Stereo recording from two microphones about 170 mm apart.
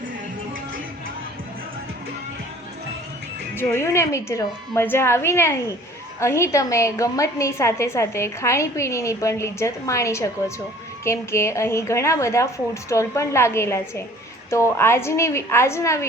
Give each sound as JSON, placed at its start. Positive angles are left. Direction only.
{"t": 3.5, "sound": "a woman's voice", "side_deg": 15}